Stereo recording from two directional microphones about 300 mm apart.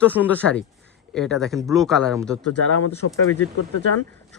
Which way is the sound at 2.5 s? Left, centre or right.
Left.